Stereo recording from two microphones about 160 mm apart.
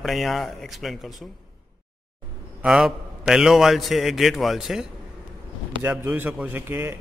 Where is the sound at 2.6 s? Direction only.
5° right (ahead or behind).